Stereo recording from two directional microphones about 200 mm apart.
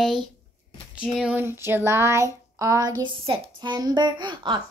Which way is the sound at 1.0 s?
5° right (ahead or behind).